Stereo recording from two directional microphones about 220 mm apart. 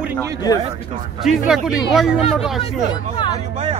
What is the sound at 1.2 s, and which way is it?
Speech, centre (ahead or behind).